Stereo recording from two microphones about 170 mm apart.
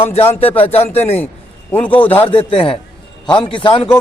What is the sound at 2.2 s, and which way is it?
A man's voice, 30° left (ahead or behind).